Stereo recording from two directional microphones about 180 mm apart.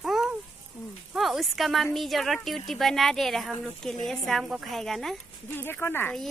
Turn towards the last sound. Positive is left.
turn(degrees=10)  # may be behind; listen again after turning